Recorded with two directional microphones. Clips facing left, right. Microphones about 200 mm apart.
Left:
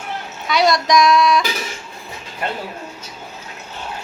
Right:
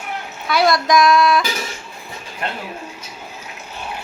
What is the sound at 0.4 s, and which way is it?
Speech, centre (ahead or behind).